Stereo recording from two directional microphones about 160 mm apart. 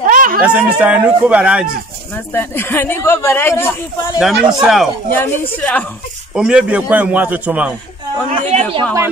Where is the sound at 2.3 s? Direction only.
15° left (ahead or behind).